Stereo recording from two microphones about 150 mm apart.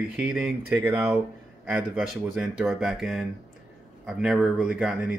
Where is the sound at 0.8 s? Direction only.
15° right (ahead or behind).